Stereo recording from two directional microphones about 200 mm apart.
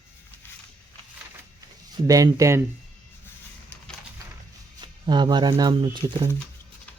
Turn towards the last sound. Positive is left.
turn(degrees=-25)  # may be behind; listen again after turning